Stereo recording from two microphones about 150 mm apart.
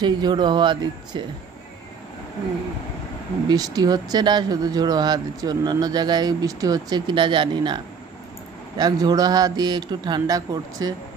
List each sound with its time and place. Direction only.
0.0 s speech: 30° right (ahead or behind)
3.4 s speech: 25° right (ahead or behind)